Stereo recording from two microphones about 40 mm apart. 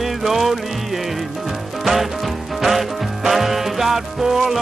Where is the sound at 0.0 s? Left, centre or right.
Centre.